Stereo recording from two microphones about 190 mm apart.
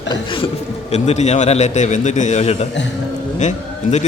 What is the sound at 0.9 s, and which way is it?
A man's voice, 35° left (ahead or behind).